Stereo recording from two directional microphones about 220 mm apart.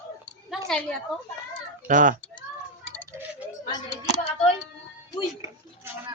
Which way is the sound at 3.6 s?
20° left (ahead or behind).